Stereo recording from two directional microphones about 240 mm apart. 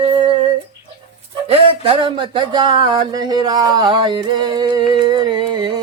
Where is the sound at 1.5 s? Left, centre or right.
Right.